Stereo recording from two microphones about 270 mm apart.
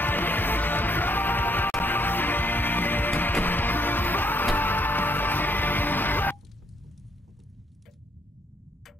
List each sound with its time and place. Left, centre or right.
0.0 s music: centre